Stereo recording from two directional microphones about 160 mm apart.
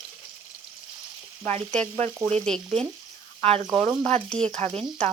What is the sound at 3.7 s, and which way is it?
Speech, 40° right (ahead or behind).